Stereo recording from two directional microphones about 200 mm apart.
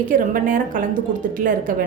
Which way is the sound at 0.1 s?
40° right (ahead or behind).